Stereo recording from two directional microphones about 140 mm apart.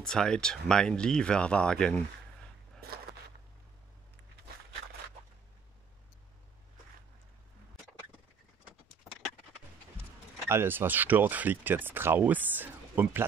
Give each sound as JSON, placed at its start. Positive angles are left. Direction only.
{"t": 0.0, "sound": "speech", "side_deg": 5}
{"t": 2.8, "sound": "biting", "side_deg": -90}
{"t": 10.5, "sound": "speech", "side_deg": -15}